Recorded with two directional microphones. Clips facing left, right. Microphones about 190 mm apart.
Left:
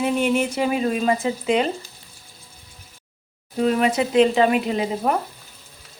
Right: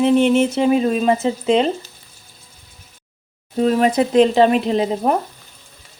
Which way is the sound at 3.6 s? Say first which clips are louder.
Right 4 dB; 35° right (ahead or behind).